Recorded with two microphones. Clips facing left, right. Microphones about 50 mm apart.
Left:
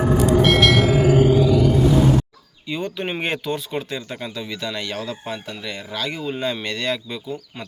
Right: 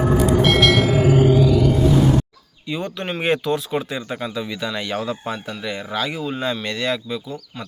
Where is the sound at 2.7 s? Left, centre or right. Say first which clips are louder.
Even; centre.